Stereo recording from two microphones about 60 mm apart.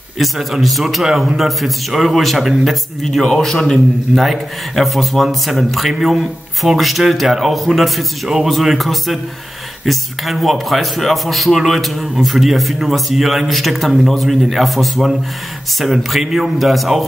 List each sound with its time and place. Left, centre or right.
0.2 s a man's voice: centre